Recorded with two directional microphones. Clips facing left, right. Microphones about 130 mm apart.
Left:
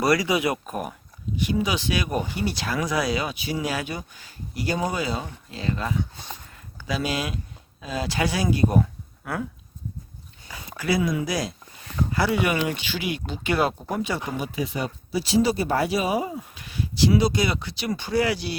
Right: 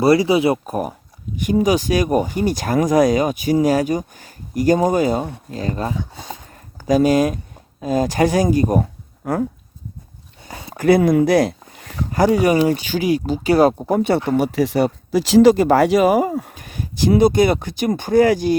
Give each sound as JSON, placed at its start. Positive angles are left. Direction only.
{"t": 0.0, "sound": "speech", "side_deg": -30}
{"t": 6.5, "sound": "a sound", "side_deg": -40}
{"t": 7.8, "sound": "speech", "side_deg": -45}
{"t": 10.8, "sound": "speech", "side_deg": -55}
{"t": 14.3, "sound": "speech", "side_deg": -70}
{"t": 16.2, "sound": "speech", "side_deg": -55}